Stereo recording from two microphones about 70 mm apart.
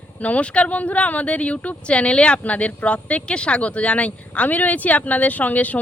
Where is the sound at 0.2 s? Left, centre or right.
Centre.